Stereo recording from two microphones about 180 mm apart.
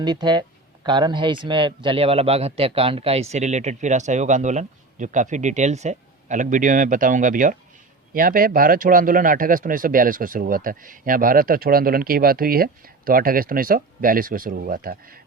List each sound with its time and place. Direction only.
0.0 s a man's voice: 25° right (ahead or behind); by 15.2 s 55° right (ahead or behind)